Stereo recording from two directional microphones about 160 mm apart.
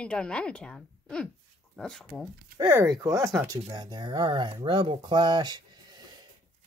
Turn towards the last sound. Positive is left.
turn(degrees=-25)  # may be behind; listen again after turning